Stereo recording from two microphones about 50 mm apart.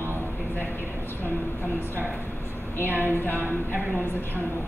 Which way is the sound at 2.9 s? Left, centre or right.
Right.